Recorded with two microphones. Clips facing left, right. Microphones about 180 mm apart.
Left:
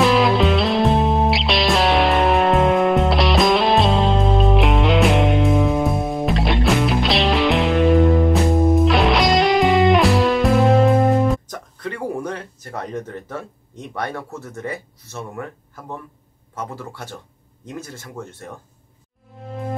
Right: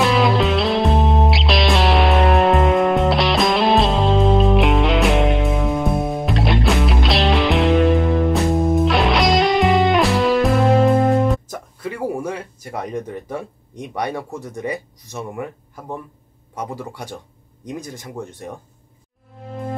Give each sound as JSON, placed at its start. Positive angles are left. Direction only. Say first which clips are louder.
{"t": 0.0, "sound": "music", "louder": "left 1 dB", "side_deg": 0}
{"t": 16.5, "sound": "speech", "louder": "right 2 dB", "side_deg": -15}
{"t": 19.3, "sound": "music", "louder": "even", "side_deg": 0}